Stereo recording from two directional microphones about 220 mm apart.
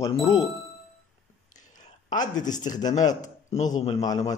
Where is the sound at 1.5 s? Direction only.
35° left (ahead or behind).